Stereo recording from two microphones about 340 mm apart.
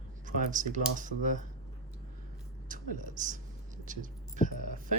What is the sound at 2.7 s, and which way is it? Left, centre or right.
Speech, right.